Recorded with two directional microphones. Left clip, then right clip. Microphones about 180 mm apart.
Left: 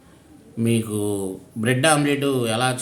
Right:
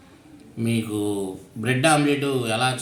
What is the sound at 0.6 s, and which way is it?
A man's voice, 70° left (ahead or behind).